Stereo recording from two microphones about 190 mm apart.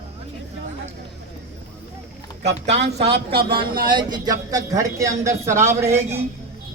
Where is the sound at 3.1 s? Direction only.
60° right (ahead or behind).